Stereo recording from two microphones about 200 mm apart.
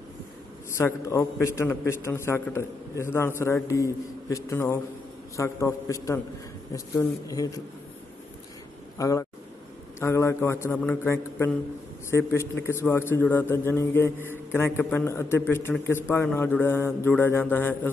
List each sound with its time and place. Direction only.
0.7 s a man's voice: 15° left (ahead or behind)
8.9 s a man's voice: 15° left (ahead or behind)